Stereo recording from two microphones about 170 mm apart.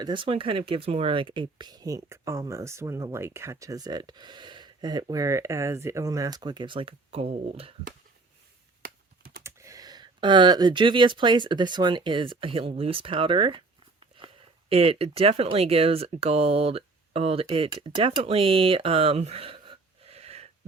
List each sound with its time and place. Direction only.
0.0 s speech: 30° right (ahead or behind)
9.4 s speech: 15° right (ahead or behind)
14.7 s speech: 35° right (ahead or behind)